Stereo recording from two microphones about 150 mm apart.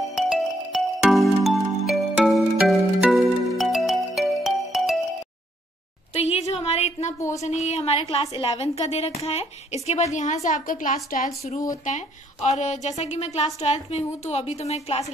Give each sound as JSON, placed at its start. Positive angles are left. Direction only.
{"t": 0.1, "sound": "music", "side_deg": 0}
{"t": 6.1, "sound": "a sound", "side_deg": 45}
{"t": 7.4, "sound": "a woman's voice", "side_deg": 50}